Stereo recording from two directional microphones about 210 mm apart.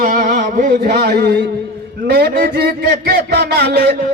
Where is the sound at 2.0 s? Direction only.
50° right (ahead or behind).